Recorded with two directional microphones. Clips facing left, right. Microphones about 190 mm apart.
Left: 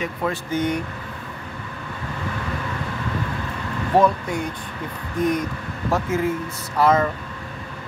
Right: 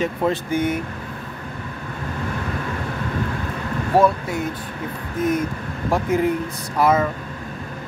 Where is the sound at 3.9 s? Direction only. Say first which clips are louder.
Right 1 dB; 5° right (ahead or behind).